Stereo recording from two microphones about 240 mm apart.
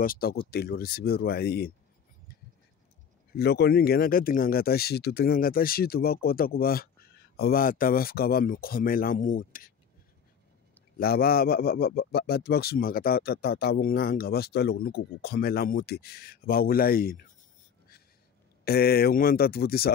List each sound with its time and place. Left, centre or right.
0.0 s a man's voice: left
3.3 s a man's voice: left
11.0 s a man's voice: left
18.6 s a man's voice: left